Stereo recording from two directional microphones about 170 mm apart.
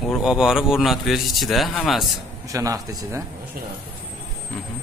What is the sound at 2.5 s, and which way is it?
Speech, 20° right (ahead or behind).